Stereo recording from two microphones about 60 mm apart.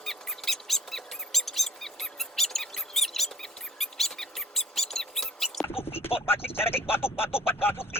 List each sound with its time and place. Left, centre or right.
0.0 s squeak: centre
6.0 s speech: left